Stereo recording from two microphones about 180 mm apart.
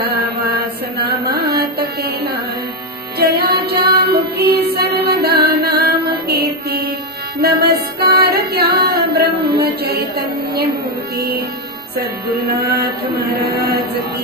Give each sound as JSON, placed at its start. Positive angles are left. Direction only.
{"t": 0.0, "sound": "mantra", "side_deg": -60}
{"t": 3.2, "sound": "music", "side_deg": -60}
{"t": 8.8, "sound": "a sound", "side_deg": -65}
{"t": 11.1, "sound": "music", "side_deg": -60}